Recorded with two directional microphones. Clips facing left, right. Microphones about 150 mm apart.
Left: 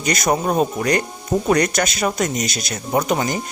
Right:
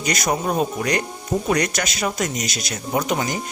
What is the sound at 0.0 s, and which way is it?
Speech, 50° left (ahead or behind).